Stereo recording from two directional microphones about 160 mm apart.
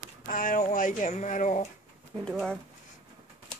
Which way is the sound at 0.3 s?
55° left (ahead or behind).